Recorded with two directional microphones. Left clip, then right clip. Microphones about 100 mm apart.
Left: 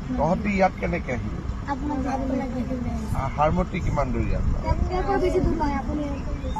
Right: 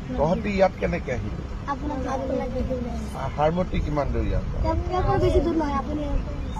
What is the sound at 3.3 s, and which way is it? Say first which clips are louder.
Speech: even; 35° right (ahead or behind).